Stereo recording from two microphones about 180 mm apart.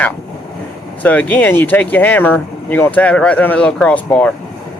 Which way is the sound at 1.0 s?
10° left (ahead or behind).